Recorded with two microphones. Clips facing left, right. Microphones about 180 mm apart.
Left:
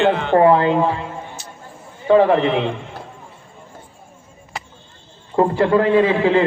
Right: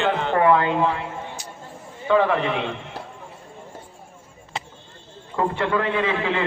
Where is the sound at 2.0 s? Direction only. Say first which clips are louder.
Left 6 dB; 35° left (ahead or behind).